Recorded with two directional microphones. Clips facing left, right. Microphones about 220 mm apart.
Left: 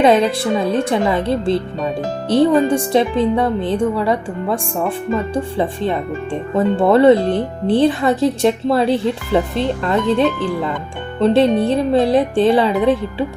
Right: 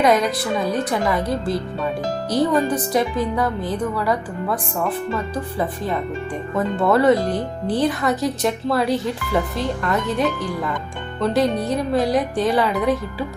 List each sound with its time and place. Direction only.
0.0 s speech: 30° left (ahead or behind)